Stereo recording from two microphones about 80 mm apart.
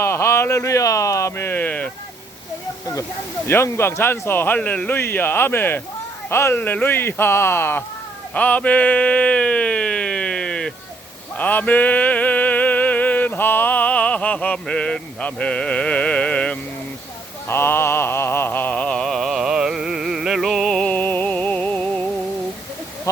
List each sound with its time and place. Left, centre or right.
0.0 s speech: left; by 1.9 s centre
3.4 s speech: left
6.6 s speech: left
8.3 s a sound: centre
11.3 s music: centre
17.5 s a sound: left; by 19.0 s centre
19.0 s music: centre
20.9 s music: left